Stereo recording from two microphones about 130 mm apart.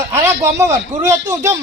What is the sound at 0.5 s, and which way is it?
Speech, 25° right (ahead or behind).